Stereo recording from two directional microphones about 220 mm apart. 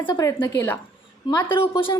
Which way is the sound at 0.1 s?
15° left (ahead or behind).